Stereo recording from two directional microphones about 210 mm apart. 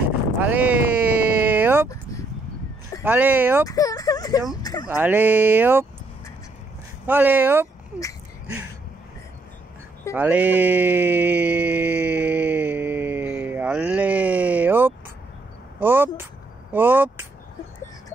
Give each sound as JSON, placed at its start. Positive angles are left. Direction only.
{"t": 0.4, "sound": "speech", "side_deg": -5}
{"t": 1.4, "sound": "a sound", "side_deg": -10}
{"t": 3.0, "sound": "speech", "side_deg": -10}
{"t": 3.6, "sound": "speech", "side_deg": 15}
{"t": 4.8, "sound": "speech", "side_deg": -10}
{"t": 7.1, "sound": "speech", "side_deg": -10}
{"t": 10.1, "sound": "a sound", "side_deg": -5}
{"t": 15.8, "sound": "speech", "side_deg": -10}